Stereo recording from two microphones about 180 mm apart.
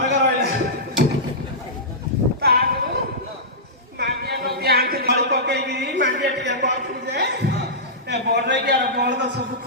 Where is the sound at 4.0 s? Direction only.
65° right (ahead or behind).